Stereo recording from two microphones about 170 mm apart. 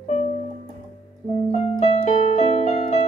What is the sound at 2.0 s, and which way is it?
Keyboard, 40° left (ahead or behind).